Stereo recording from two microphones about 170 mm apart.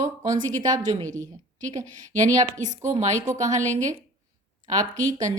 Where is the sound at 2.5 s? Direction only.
45° right (ahead or behind).